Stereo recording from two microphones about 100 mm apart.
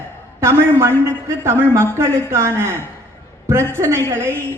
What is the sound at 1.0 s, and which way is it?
A man's voice, 25° right (ahead or behind).